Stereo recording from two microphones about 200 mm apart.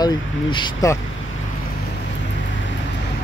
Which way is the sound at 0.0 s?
20° left (ahead or behind).